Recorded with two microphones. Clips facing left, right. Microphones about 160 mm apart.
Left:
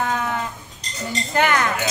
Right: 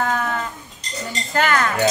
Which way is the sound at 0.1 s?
15° left (ahead or behind).